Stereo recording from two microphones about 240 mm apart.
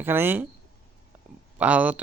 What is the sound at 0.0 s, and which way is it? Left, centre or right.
Speech, centre.